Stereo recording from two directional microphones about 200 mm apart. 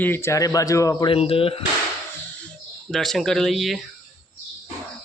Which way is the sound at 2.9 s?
Centre (ahead or behind).